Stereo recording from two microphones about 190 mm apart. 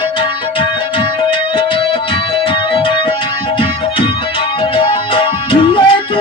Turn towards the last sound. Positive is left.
turn(degrees=25)  # may be behind; listen again after turning